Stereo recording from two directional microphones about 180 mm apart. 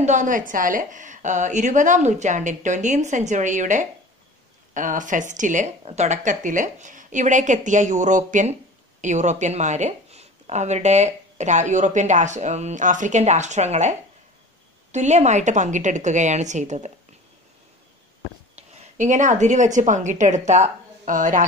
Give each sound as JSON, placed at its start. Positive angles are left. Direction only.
{"t": 0.0, "sound": "speech", "side_deg": -45}
{"t": 18.6, "sound": "a woman's voice", "side_deg": -40}